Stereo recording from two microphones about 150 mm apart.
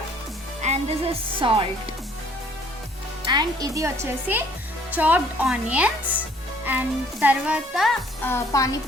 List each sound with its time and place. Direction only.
0.6 s speech: 45° right (ahead or behind)
3.2 s speech: 25° right (ahead or behind); by 7.9 s centre (ahead or behind)
8.2 s a woman's voice: 20° left (ahead or behind)